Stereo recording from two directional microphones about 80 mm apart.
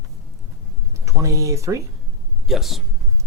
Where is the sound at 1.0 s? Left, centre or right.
Right.